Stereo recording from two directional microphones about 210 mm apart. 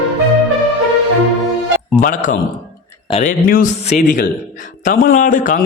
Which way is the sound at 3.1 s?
35° left (ahead or behind).